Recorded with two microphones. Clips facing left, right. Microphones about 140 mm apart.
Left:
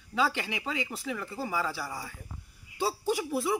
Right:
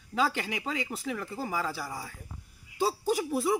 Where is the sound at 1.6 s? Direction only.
Centre (ahead or behind).